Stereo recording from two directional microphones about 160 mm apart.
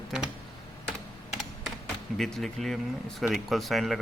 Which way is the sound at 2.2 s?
Centre (ahead or behind).